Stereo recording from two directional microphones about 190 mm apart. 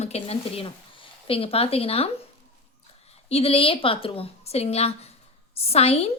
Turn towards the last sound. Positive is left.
turn(degrees=35)  # may be behind; listen again after turning